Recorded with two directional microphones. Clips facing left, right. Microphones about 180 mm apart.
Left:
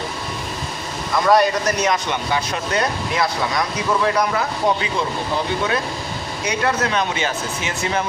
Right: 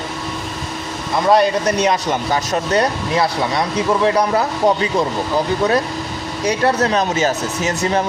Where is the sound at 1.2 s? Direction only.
30° right (ahead or behind).